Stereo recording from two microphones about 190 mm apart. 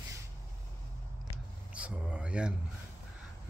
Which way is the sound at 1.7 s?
5° right (ahead or behind).